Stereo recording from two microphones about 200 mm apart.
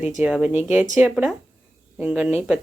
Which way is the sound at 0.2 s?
5° right (ahead or behind).